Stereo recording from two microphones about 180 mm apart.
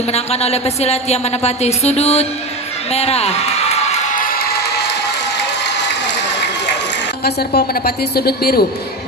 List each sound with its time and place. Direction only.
0.1 s a woman's voice: 35° left (ahead or behind)
7.2 s a woman's voice: 60° left (ahead or behind)